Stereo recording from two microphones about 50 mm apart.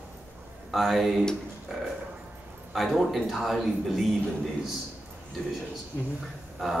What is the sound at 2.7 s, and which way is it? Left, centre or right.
A man's voice, centre.